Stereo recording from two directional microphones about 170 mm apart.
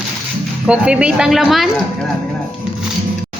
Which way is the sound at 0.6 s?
5° right (ahead or behind).